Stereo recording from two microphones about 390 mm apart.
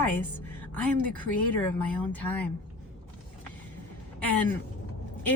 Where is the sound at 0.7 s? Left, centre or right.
Centre.